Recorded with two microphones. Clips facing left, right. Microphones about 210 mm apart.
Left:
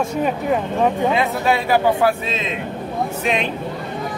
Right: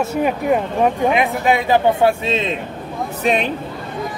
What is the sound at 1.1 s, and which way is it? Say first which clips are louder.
Speech: right 2 dB; 15° right (ahead or behind).